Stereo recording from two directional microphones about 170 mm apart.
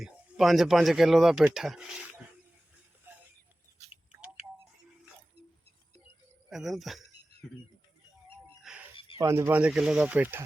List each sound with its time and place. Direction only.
0.0 s speech: centre (ahead or behind)
6.5 s speech: centre (ahead or behind)
9.1 s speech: 15° right (ahead or behind)